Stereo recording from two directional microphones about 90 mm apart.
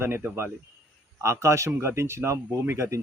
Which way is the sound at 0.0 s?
25° right (ahead or behind).